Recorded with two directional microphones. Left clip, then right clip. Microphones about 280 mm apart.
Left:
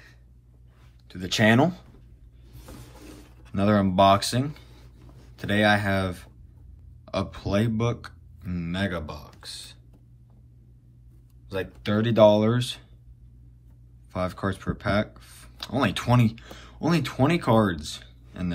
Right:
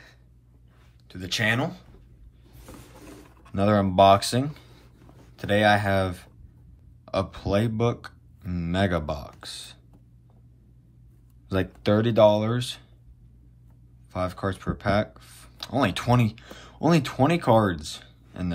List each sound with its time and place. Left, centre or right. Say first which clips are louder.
1.0 s speech: left 3 dB; centre
3.5 s speech: right 2 dB; centre; by 9.8 s right
11.4 s speech: right 4 dB; right
11.9 s speech: even; centre
14.1 s speech: even; centre